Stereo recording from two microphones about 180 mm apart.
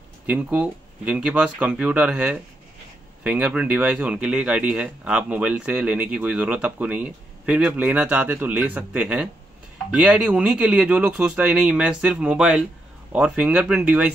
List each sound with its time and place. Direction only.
0.3 s a man's voice: 10° right (ahead or behind)